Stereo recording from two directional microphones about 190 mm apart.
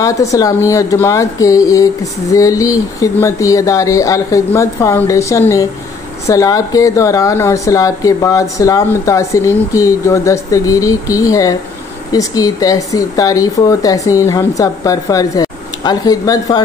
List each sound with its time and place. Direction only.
0.0 s speech: 15° left (ahead or behind)